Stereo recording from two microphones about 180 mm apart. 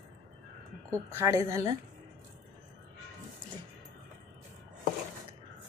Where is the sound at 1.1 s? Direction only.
20° right (ahead or behind).